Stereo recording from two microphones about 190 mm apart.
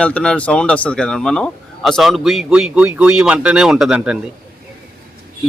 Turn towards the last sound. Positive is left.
turn(degrees=-5)  # may be behind; listen again after turning